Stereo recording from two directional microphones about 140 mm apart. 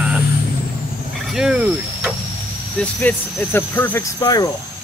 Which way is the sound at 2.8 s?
10° left (ahead or behind).